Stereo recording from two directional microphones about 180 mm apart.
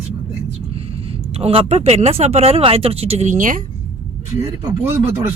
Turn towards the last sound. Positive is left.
turn(degrees=-15)  # may be behind; listen again after turning